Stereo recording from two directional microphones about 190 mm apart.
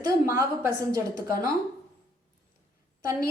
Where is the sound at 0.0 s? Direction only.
20° right (ahead or behind).